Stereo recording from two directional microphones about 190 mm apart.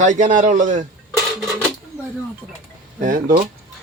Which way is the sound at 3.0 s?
45° right (ahead or behind).